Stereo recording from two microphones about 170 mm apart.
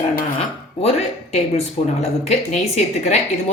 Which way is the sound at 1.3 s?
40° left (ahead or behind).